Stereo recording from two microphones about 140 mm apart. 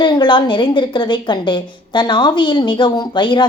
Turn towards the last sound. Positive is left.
turn(degrees=35)  # may be behind; listen again after turning